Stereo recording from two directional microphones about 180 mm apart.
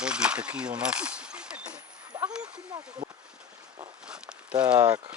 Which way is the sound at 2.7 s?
25° right (ahead or behind).